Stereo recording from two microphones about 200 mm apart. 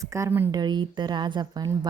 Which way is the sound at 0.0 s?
15° right (ahead or behind).